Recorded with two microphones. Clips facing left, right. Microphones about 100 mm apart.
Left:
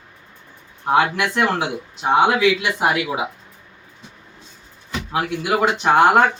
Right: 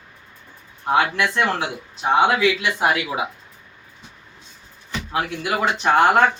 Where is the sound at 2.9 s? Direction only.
5° left (ahead or behind).